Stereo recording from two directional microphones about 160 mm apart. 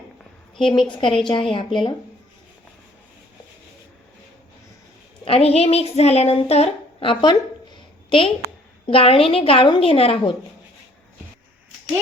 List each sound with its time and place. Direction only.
0.5 s speech: 30° left (ahead or behind)
5.2 s speech: 40° left (ahead or behind)